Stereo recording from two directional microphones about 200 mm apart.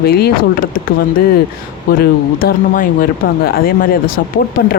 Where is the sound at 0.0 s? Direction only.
50° left (ahead or behind).